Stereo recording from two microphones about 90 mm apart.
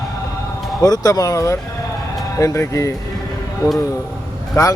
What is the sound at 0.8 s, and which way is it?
Speech, 45° left (ahead or behind).